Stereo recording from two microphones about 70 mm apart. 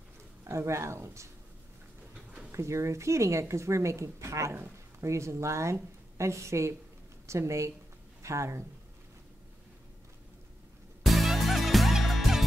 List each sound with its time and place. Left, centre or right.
0.5 s a woman's voice: right
2.5 s a woman's voice: right
11.0 s music: centre